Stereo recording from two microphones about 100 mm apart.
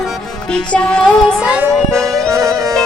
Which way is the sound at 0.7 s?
10° left (ahead or behind).